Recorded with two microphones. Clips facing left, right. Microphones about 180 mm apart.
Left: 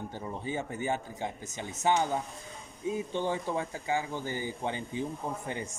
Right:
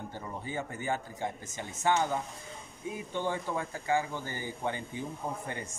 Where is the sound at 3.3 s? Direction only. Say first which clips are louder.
Left 2 dB; 20° left (ahead or behind).